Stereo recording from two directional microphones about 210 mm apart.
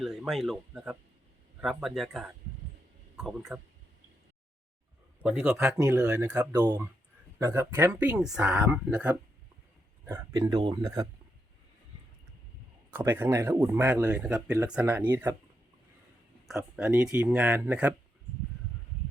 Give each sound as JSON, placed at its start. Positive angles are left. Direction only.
{"t": 0.0, "sound": "speech", "side_deg": 0}
{"t": 5.2, "sound": "speech", "side_deg": -5}
{"t": 12.9, "sound": "speech", "side_deg": -10}
{"t": 16.5, "sound": "speech", "side_deg": 0}